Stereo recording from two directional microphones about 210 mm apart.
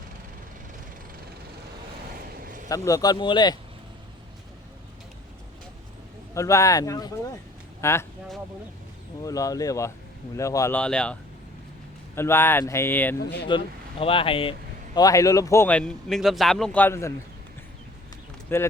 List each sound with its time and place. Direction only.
2.4 s a sound: 40° right (ahead or behind)
2.6 s speech: 15° left (ahead or behind)
6.3 s a man's voice: 15° left (ahead or behind)
9.2 s a man's voice: 15° left (ahead or behind)
13.5 s a man's voice: 25° left (ahead or behind)
18.4 s speech: 10° left (ahead or behind)